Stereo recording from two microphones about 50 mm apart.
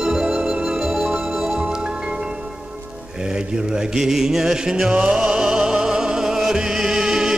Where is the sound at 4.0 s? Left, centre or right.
Centre.